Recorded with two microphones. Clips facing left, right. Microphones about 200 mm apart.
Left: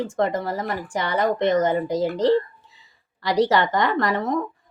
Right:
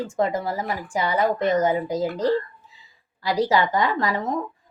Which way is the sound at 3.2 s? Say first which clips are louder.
Left 2 dB; 70° left (ahead or behind).